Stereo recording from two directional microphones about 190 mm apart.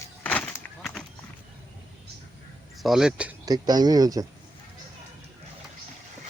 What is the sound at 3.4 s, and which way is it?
Speech, 20° right (ahead or behind).